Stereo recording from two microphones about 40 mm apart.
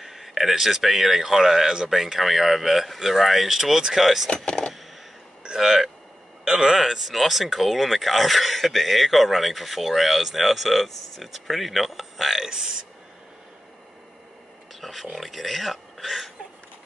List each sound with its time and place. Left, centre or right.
0.0 s speech: centre
4.5 s a sound: centre
5.6 s a man's voice: centre
12.4 s speech: centre
14.7 s speech: centre